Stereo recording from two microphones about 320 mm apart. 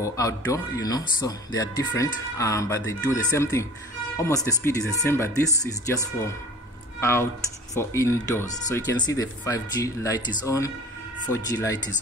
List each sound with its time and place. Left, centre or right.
0.0 s speech: centre